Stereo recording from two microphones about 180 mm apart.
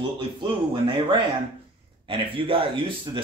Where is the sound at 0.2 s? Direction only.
30° right (ahead or behind).